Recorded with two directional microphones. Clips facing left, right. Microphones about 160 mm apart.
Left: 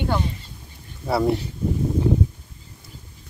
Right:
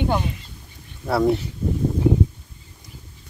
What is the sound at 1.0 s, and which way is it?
Speech, centre (ahead or behind).